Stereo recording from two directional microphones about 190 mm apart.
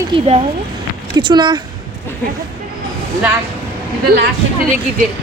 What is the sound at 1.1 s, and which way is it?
Speech, 25° right (ahead or behind).